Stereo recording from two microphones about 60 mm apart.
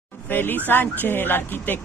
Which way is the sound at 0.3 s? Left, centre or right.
Left.